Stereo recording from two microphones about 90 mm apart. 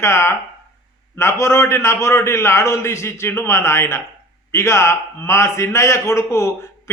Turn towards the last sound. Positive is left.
turn(degrees=30)  # may be behind; listen again after turning